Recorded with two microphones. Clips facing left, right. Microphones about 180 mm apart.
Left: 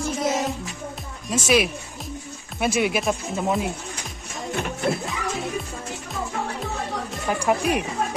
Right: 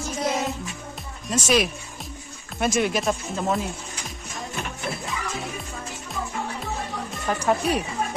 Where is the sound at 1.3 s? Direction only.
10° left (ahead or behind).